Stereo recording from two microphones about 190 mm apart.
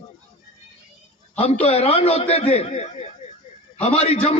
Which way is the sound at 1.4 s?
30° left (ahead or behind).